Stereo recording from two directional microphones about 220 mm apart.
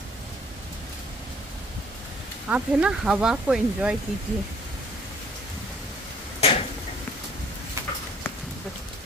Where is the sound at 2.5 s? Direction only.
5° right (ahead or behind).